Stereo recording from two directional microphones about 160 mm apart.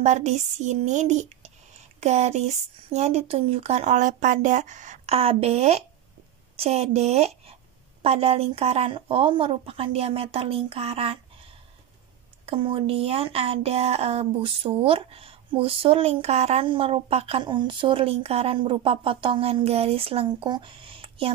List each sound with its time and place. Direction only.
0.0 s speech: 45° right (ahead or behind)
12.4 s speech: 35° right (ahead or behind)